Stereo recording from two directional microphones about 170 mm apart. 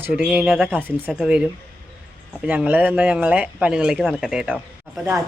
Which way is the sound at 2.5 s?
10° right (ahead or behind).